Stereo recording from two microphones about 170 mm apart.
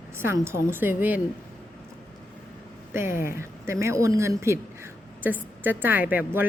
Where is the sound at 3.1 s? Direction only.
55° left (ahead or behind).